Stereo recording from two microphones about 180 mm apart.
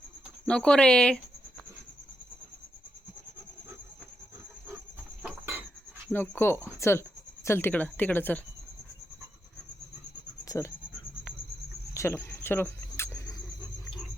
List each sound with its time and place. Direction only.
0.4 s speech: 5° left (ahead or behind)
6.1 s speech: 10° left (ahead or behind)
10.4 s cricket: 20° left (ahead or behind)
11.9 s cricket: 15° left (ahead or behind)